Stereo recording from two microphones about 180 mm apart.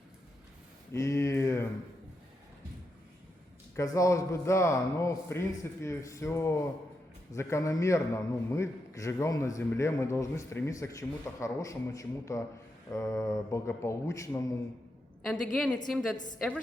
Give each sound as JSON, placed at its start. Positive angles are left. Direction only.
{"t": 0.9, "sound": "a sound", "side_deg": 15}
{"t": 3.8, "sound": "a man's voice", "side_deg": 15}
{"t": 15.5, "sound": "a woman's voice", "side_deg": 0}